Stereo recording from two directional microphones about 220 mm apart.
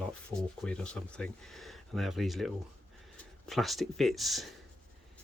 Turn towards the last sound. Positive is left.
turn(degrees=0)  # may be behind; listen again after turning